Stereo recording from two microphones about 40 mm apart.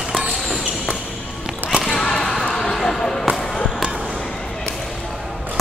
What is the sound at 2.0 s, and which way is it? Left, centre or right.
Basketball bounce, centre.